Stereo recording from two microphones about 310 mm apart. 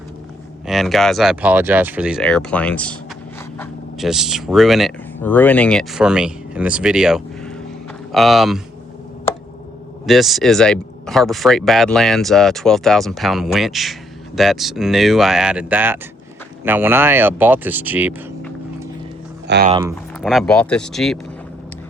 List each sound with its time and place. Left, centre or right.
0.7 s speech: centre
10.1 s speech: centre
19.5 s speech: right
20.2 s speech: centre